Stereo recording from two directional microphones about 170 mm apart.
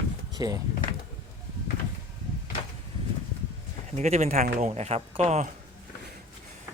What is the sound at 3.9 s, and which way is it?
A man's voice, 40° right (ahead or behind).